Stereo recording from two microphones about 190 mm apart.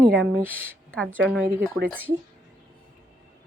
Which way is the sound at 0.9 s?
5° left (ahead or behind).